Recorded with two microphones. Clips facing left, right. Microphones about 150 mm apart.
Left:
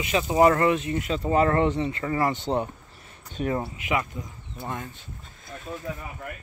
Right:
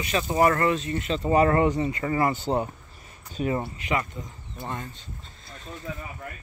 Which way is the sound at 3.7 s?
5° left (ahead or behind).